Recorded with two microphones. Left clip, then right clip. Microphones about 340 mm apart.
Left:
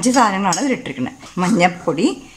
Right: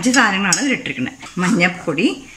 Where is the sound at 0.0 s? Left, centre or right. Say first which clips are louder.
Even; centre.